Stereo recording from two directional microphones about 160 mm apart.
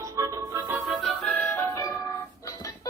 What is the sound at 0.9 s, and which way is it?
Music, centre (ahead or behind).